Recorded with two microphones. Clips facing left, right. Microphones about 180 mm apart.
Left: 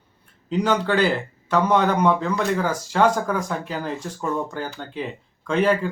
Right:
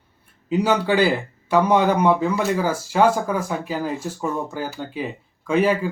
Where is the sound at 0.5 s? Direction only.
10° right (ahead or behind).